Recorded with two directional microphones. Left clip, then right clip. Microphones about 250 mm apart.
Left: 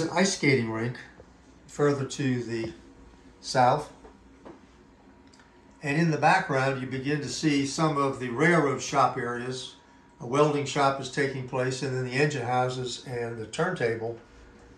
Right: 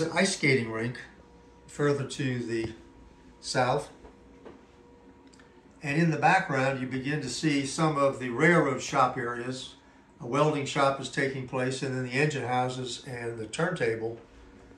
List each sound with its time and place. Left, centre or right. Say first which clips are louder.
0.1 s speech: left 2 dB; centre
5.8 s speech: left 1 dB; centre